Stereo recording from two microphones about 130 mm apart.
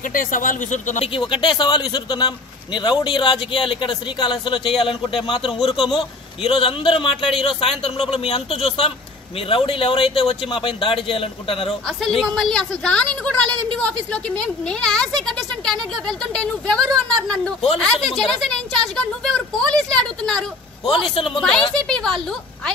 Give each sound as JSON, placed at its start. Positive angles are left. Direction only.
{"t": 0.1, "sound": "speech", "side_deg": 90}
{"t": 1.0, "sound": "a man's voice", "side_deg": 40}
{"t": 12.0, "sound": "a woman's voice", "side_deg": 0}
{"t": 20.8, "sound": "a man's voice", "side_deg": 40}
{"t": 21.4, "sound": "speech", "side_deg": 5}